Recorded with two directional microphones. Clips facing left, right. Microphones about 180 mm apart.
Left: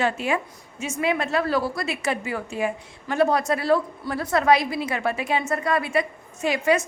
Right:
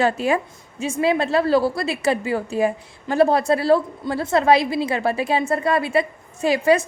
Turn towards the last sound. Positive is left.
turn(degrees=-35)  # may be behind; listen again after turning